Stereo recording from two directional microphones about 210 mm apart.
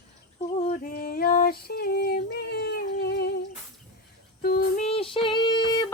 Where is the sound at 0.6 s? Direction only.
40° left (ahead or behind).